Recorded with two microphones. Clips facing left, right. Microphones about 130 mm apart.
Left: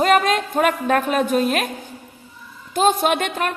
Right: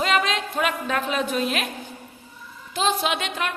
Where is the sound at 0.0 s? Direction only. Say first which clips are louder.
Left 6 dB; 50° left (ahead or behind).